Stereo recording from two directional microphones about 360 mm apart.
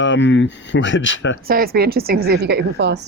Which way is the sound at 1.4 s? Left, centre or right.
Right.